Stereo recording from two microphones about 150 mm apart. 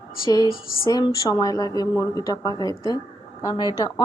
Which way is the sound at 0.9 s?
30° left (ahead or behind).